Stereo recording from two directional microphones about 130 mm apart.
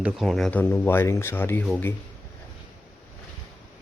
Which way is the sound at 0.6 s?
15° left (ahead or behind).